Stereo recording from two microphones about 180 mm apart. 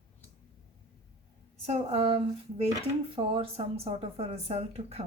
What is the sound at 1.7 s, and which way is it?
Speech, 35° right (ahead or behind).